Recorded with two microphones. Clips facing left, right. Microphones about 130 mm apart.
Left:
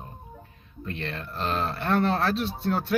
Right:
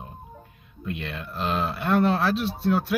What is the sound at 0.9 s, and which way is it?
Speech, 5° right (ahead or behind).